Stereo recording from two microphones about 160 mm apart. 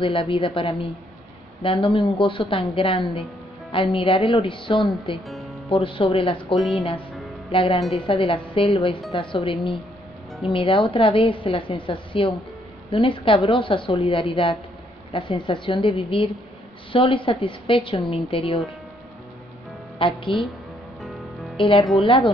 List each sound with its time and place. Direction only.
0.0 s a woman's voice: 35° left (ahead or behind)
4.7 s a woman's voice: centre (ahead or behind)
5.3 s music: centre (ahead or behind)
5.7 s a woman's voice: 35° left (ahead or behind)
6.5 s a woman's voice: centre (ahead or behind)
7.5 s a woman's voice: 35° left (ahead or behind)
20.0 s a woman's voice: 35° left (ahead or behind)
21.0 s music: centre (ahead or behind)
22.0 s a woman's voice: 30° left (ahead or behind)